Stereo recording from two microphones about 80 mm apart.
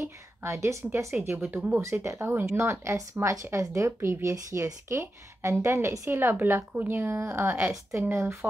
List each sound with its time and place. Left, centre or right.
0.0 s a woman's voice: right
1.1 s speech: centre
1.8 s a woman's voice: right